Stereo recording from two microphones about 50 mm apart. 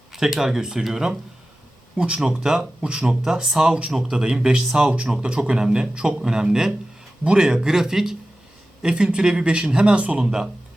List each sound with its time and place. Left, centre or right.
0.1 s speech: centre
2.0 s a man's voice: centre
10.2 s speech: centre